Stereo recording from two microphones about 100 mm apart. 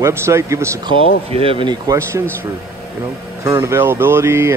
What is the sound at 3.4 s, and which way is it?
Speech, 30° right (ahead or behind).